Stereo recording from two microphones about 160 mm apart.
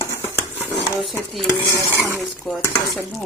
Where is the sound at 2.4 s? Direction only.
Centre (ahead or behind).